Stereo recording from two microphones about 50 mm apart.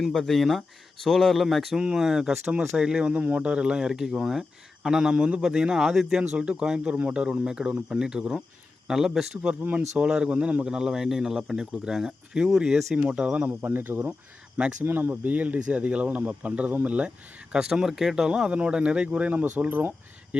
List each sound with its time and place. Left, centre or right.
0.2 s speech: centre
1.7 s speech: centre
3.1 s speech: right
5.1 s speech: right
6.3 s speech: right
13.6 s speech: right
15.1 s speech: right
17.5 s speech: centre; by 19.9 s right
20.3 s speech: centre